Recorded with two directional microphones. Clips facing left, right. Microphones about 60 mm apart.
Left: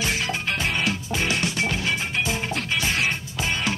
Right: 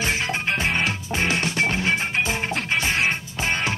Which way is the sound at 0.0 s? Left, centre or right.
Right.